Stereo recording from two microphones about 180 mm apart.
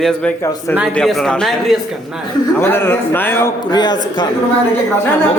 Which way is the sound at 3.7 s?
25° left (ahead or behind).